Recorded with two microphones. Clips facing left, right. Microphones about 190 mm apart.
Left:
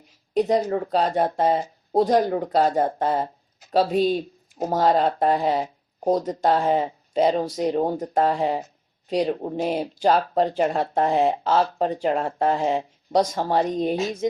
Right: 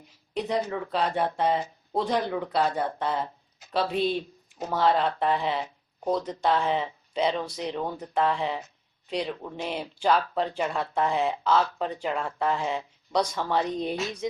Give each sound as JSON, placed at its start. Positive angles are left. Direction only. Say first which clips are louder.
{"t": 0.3, "sound": "speech", "louder": "left 7 dB", "side_deg": 45}